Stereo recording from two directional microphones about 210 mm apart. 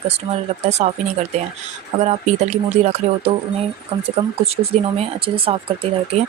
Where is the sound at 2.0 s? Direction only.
30° right (ahead or behind).